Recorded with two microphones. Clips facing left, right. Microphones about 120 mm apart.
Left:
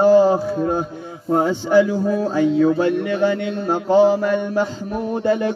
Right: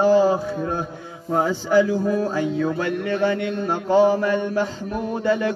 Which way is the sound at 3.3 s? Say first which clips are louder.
Left 2 dB; 30° left (ahead or behind).